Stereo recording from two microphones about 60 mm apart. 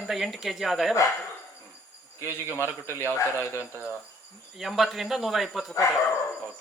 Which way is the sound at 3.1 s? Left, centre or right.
Left.